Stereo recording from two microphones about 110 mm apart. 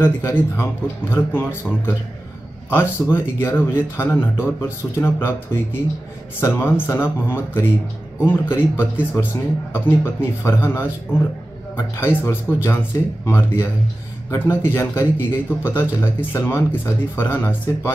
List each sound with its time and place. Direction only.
0.0 s a man's voice: 20° left (ahead or behind)